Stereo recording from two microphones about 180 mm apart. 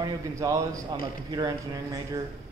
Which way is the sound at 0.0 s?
20° right (ahead or behind).